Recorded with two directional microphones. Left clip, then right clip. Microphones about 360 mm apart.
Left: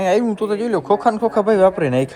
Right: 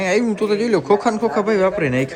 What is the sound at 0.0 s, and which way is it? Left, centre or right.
Speech, centre.